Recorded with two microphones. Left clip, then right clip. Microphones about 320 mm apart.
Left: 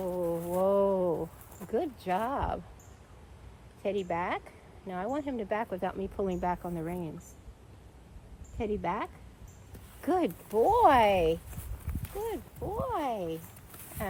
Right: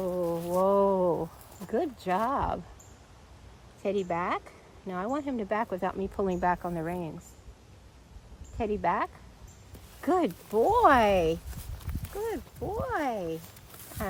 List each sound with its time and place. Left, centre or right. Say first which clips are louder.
0.0 s a sound: right 2 dB; right
1.7 s speech: right 2 dB; right
3.8 s speech: right 2 dB; right
8.5 s speech: right 4 dB; right